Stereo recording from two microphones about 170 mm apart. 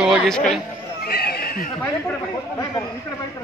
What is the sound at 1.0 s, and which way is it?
Neigh, 65° left (ahead or behind).